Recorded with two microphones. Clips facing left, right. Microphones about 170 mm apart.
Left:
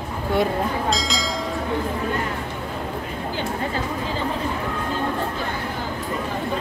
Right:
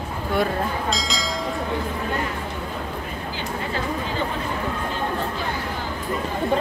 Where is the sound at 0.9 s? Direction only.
Centre (ahead or behind).